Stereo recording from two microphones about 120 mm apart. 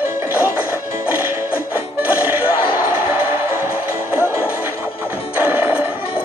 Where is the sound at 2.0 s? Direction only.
15° right (ahead or behind).